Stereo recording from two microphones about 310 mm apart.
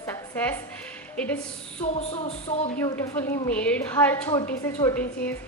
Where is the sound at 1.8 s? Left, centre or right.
Left.